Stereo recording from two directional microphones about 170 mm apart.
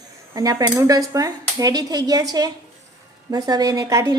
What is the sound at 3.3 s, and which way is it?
Speech, 20° right (ahead or behind).